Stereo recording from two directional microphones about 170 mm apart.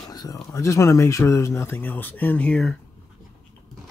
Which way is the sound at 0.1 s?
20° left (ahead or behind).